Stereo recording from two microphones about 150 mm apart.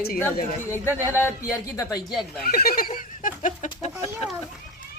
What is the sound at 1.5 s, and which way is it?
Speech, 25° left (ahead or behind).